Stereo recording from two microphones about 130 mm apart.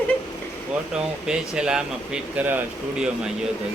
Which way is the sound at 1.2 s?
5° right (ahead or behind).